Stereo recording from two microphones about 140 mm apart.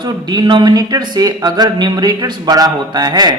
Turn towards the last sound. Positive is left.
turn(degrees=-30)  # may be behind; listen again after turning